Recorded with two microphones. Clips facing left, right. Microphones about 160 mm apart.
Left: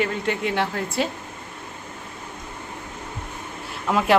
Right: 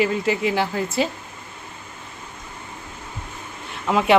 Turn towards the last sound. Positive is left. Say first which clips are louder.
# right 2 dB
turn(degrees=0)  # may be behind; listen again after turning